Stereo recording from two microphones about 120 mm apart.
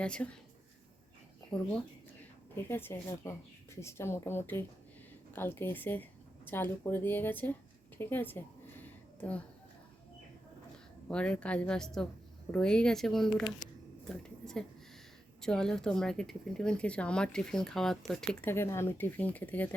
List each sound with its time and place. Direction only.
0.0 s speech: 10° left (ahead or behind)
1.5 s speech: 10° left (ahead or behind)
7.9 s a sound: 20° left (ahead or behind)
11.1 s a woman's voice: 10° left (ahead or behind)
14.0 s a sound: 5° left (ahead or behind)
15.4 s a woman's voice: 5° left (ahead or behind)
18.4 s speech: 20° left (ahead or behind)